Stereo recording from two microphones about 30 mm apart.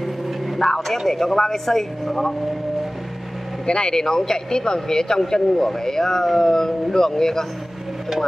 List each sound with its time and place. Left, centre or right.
0.6 s speech: centre
3.6 s speech: left
3.9 s speech: centre